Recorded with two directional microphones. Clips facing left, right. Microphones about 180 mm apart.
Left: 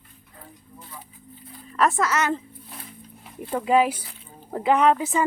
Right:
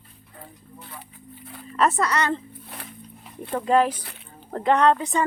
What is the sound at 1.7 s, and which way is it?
Speech, centre (ahead or behind).